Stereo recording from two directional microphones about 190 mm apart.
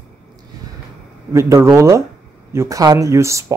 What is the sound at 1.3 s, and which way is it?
Speech, 15° right (ahead or behind).